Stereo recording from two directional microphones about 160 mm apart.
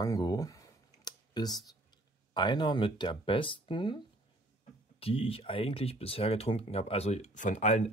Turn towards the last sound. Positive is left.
turn(degrees=45)  # may be behind; listen again after turning